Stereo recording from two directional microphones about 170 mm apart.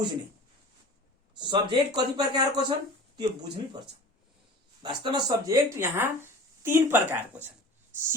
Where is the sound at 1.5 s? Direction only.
25° right (ahead or behind).